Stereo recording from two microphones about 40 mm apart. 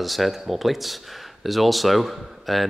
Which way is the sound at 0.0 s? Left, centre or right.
Centre.